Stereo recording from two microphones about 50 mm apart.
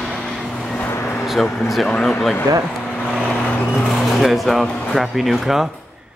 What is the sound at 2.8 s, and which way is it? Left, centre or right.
Vehicle, centre.